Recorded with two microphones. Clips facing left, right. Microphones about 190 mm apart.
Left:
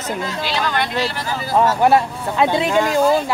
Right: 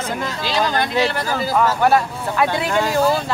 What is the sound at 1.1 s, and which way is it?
Speech, 55° right (ahead or behind).